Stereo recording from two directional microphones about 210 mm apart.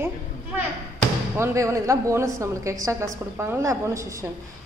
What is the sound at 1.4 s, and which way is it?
A woman's voice, 15° right (ahead or behind).